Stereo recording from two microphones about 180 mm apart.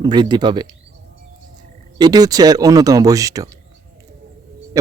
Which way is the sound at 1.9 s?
20° right (ahead or behind).